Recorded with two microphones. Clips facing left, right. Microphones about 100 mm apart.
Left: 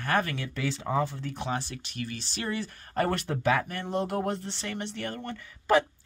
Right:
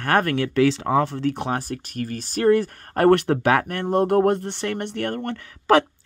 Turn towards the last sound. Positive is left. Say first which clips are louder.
# right 6 dB
turn(degrees=-85)